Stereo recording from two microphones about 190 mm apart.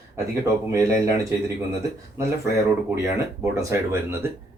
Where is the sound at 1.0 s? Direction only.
15° right (ahead or behind).